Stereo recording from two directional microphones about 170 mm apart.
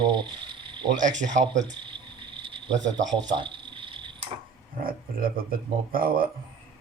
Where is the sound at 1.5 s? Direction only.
25° right (ahead or behind).